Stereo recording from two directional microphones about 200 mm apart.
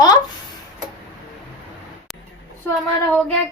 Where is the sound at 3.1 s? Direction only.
5° left (ahead or behind).